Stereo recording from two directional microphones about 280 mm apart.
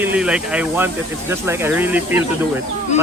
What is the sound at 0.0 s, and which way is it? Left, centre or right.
Speech, centre.